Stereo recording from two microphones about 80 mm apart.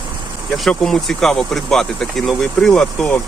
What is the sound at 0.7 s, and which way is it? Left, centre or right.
Speech, centre.